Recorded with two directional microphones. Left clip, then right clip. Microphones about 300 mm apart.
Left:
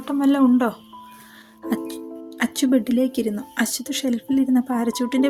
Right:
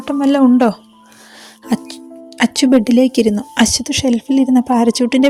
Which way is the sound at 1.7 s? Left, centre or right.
Left.